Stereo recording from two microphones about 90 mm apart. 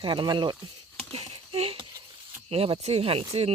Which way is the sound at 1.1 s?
90° right.